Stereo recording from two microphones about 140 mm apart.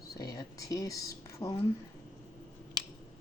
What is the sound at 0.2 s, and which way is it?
Speech, 25° left (ahead or behind).